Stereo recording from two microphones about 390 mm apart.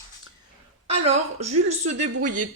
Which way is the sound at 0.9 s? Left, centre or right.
Centre.